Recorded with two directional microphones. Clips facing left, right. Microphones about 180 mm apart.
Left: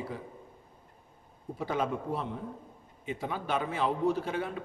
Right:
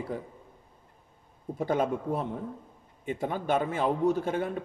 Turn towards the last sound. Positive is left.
turn(degrees=-45)  # may be behind; listen again after turning